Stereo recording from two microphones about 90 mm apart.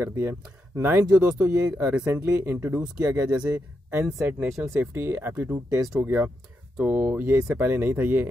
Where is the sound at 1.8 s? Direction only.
15° right (ahead or behind).